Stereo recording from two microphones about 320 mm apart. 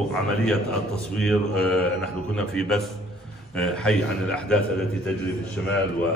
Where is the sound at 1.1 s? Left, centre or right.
Centre.